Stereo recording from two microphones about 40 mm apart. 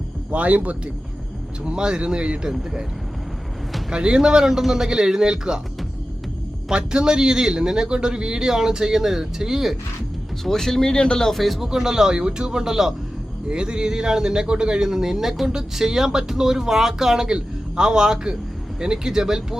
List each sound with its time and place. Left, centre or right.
0.3 s speech: right
1.6 s speech: right
3.9 s a man's voice: right
6.7 s a man's voice: right
10.4 s speech: centre
11.3 s speech: centre
11.7 s a man's voice: centre
13.5 s a man's voice: right